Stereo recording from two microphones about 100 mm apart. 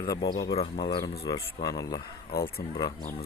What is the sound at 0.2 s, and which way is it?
Speech, 45° left (ahead or behind).